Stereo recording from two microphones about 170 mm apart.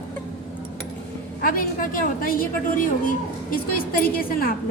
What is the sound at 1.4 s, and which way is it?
A woman's voice, 60° left (ahead or behind).